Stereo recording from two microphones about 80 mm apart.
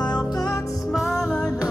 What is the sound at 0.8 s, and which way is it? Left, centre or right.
Music, centre.